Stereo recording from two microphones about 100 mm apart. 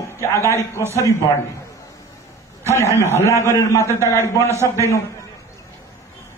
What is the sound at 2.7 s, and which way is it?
Speech, 25° left (ahead or behind).